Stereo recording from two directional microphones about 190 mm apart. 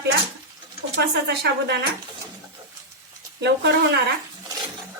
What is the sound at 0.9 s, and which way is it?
Speech, 65° right (ahead or behind).